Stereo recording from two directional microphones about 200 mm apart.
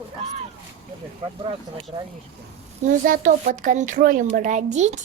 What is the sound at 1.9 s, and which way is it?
Speech, 25° right (ahead or behind).